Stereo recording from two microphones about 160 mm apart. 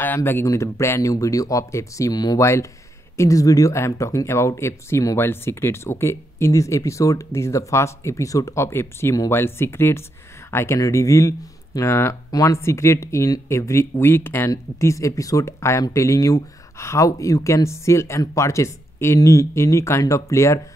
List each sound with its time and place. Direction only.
0.0 s speech: 10° left (ahead or behind)